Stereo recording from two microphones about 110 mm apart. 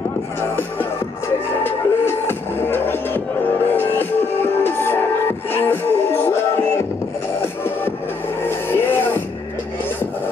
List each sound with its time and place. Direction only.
1.6 s music: 20° left (ahead or behind)
8.4 s music: 20° left (ahead or behind)